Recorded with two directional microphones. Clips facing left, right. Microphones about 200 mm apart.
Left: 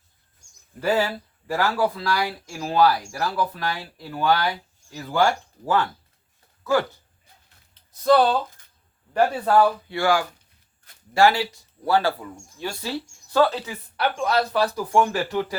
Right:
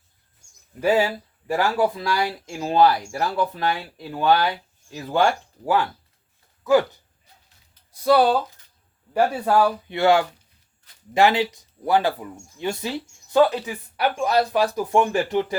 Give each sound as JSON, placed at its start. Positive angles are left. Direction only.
{"t": 0.8, "sound": "speech", "side_deg": -15}
{"t": 8.0, "sound": "speech", "side_deg": -10}